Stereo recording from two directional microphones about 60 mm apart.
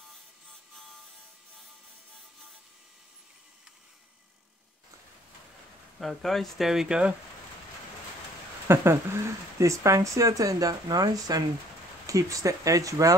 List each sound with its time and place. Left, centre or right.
5.9 s speech: centre
8.6 s speech: right
12.1 s speech: right